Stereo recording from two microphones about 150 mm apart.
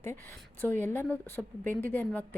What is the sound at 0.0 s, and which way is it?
A woman's voice, 15° left (ahead or behind).